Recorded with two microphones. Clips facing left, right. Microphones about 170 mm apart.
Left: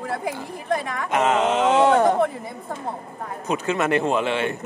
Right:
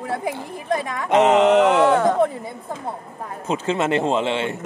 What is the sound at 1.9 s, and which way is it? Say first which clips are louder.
Speech: even; 20° left (ahead or behind).